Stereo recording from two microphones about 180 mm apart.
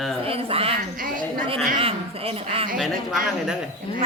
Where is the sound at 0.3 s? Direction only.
30° right (ahead or behind).